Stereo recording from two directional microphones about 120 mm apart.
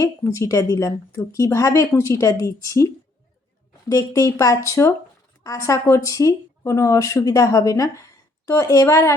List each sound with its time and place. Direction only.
0.0 s speech: 25° left (ahead or behind)